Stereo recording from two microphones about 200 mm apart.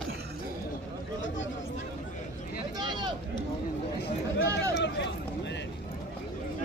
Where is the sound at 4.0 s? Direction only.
60° left (ahead or behind).